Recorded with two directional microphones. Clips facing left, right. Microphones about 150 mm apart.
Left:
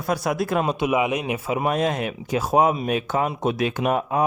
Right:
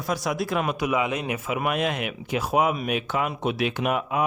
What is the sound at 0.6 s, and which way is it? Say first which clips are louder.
Speech: left 3 dB; 25° left (ahead or behind).